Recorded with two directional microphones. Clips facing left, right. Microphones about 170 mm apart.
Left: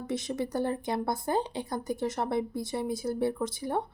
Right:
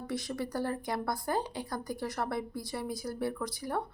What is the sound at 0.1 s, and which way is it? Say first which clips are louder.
Speech: left 4 dB; 20° left (ahead or behind).